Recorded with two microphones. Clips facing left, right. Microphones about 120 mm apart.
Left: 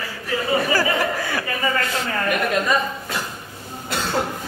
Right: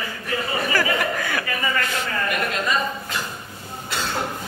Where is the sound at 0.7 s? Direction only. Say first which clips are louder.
Left 2 dB; 35° left (ahead or behind).